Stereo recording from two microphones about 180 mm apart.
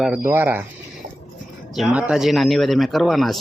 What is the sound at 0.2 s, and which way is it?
Speech, 15° right (ahead or behind).